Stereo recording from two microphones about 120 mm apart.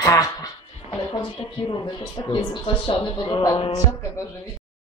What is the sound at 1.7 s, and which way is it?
Speech, 40° left (ahead or behind).